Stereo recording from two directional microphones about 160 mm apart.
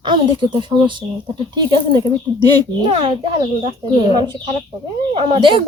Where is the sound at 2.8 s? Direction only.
35° right (ahead or behind).